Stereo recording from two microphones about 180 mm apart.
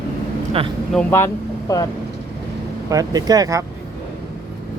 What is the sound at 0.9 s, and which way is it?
Speech, 5° left (ahead or behind).